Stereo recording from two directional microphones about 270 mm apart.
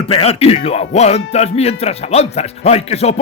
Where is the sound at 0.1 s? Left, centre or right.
Left.